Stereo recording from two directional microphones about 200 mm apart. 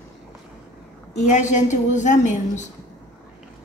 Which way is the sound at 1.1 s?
35° left (ahead or behind).